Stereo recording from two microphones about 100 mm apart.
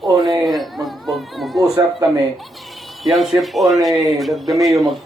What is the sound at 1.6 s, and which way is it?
Speech, 35° right (ahead or behind).